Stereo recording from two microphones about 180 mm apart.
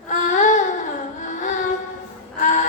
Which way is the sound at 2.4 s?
45° left (ahead or behind).